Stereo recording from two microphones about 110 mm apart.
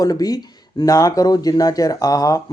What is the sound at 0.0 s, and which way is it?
A man's voice, 35° left (ahead or behind).